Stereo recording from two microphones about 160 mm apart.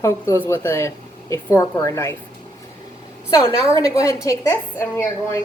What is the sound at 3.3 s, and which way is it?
A woman's voice, 20° left (ahead or behind).